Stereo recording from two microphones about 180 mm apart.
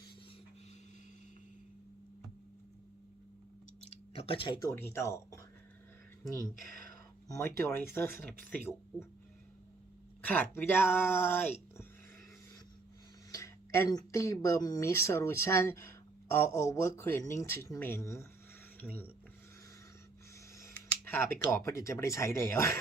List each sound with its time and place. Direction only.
3.8 s a sound: 35° left (ahead or behind)
4.7 s speech: 15° left (ahead or behind)
7.3 s speech: 15° left (ahead or behind)
10.2 s speech: 10° left (ahead or behind)
13.3 s speech: 15° left (ahead or behind)
18.8 s a sound: 10° left (ahead or behind)
20.6 s speech: 15° left (ahead or behind)